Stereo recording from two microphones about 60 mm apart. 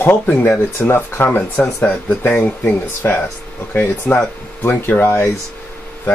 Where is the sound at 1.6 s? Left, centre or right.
Left.